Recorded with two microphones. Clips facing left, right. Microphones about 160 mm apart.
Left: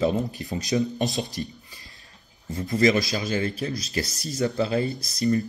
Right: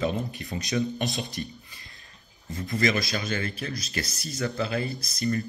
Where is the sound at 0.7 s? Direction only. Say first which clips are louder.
Left 3 dB; 20° left (ahead or behind).